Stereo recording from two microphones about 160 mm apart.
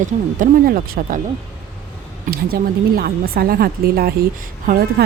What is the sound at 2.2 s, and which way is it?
Speech, 70° right (ahead or behind).